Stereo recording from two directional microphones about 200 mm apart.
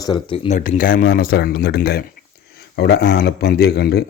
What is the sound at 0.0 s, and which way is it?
Speech, 25° left (ahead or behind).